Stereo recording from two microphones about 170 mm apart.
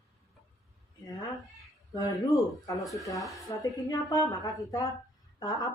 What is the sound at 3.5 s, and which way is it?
Speech, 25° left (ahead or behind).